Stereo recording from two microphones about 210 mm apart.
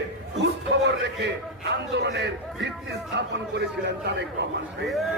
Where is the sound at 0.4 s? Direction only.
55° right (ahead or behind).